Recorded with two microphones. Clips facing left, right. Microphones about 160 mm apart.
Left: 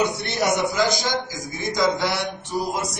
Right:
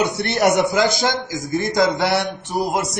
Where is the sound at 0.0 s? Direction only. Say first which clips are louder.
Right 5 dB; 65° right (ahead or behind).